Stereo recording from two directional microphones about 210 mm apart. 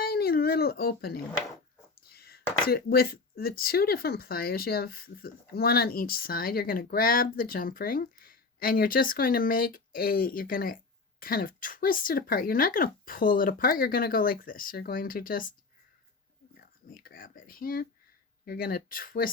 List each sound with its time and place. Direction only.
0.0 s a sound: 45° left (ahead or behind)
2.0 s speech: 45° left (ahead or behind)
16.6 s speech: 45° left (ahead or behind)